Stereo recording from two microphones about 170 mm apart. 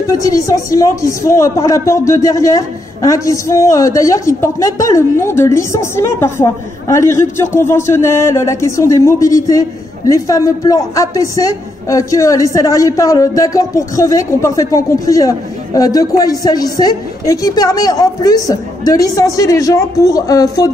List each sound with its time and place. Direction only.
0.0 s a woman's voice: 20° left (ahead or behind)